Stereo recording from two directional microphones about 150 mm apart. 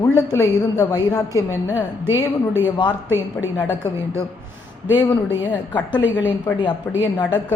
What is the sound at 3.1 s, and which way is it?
Speech, 15° right (ahead or behind).